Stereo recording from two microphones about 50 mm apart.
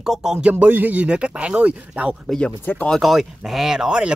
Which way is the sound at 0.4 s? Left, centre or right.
Right.